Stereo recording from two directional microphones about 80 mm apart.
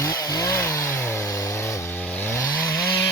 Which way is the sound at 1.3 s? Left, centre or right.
Left.